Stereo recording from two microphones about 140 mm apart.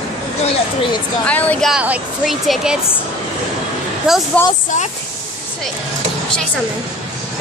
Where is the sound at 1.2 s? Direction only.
10° left (ahead or behind).